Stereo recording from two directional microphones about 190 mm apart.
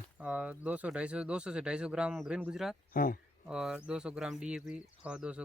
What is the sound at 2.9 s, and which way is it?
Speech, 45° left (ahead or behind).